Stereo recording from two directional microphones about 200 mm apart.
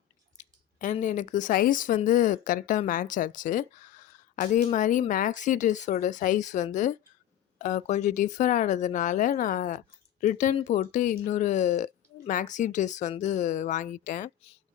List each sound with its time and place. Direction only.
0.3 s speech: 40° left (ahead or behind)